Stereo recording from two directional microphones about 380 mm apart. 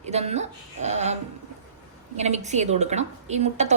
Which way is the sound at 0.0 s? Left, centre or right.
Centre.